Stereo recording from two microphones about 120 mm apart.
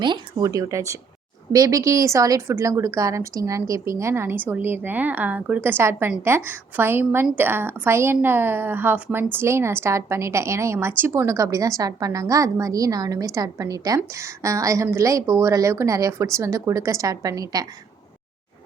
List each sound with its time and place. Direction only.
0.0 s a woman's voice: 40° right (ahead or behind)